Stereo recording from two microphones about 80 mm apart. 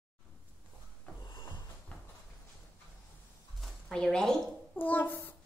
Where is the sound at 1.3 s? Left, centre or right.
Left.